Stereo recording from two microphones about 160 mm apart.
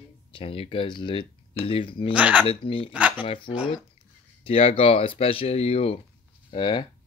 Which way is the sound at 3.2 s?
35° left (ahead or behind).